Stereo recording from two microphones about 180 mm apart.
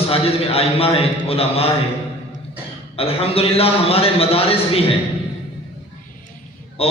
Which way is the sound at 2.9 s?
35° left (ahead or behind).